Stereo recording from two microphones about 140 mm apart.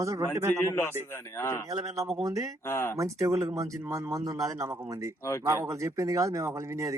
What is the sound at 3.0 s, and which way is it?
Speech, 20° right (ahead or behind).